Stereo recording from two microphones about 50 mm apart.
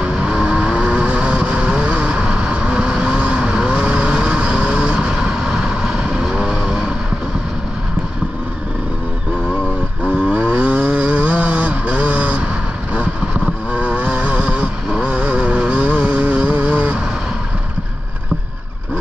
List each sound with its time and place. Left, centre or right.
0.0 s vehicle: centre
10.0 s vehicle: right
13.7 s vehicle: right